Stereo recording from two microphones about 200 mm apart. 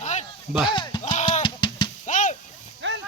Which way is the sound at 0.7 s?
20° left (ahead or behind).